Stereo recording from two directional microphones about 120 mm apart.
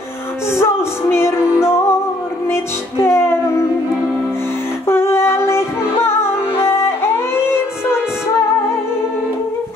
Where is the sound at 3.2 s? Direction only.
20° left (ahead or behind).